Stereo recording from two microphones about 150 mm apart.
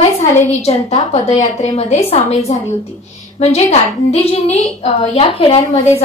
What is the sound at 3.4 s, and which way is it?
A woman's voice, 45° left (ahead or behind).